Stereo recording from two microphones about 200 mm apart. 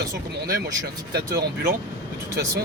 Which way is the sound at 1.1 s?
50° right (ahead or behind).